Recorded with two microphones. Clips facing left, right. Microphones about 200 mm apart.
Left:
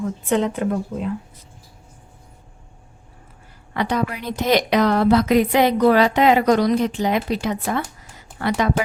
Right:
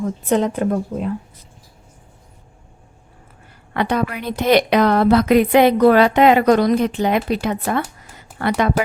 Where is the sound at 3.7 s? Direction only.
60° right (ahead or behind).